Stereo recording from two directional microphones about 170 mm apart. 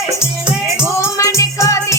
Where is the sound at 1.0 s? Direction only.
15° left (ahead or behind).